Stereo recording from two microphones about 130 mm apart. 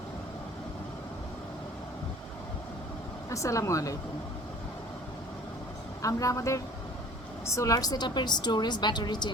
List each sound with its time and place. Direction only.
3.2 s speech: 25° left (ahead or behind)
6.0 s a woman's voice: 25° left (ahead or behind)